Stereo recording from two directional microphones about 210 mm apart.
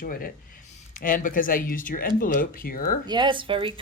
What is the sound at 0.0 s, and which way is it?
Speech, 40° left (ahead or behind).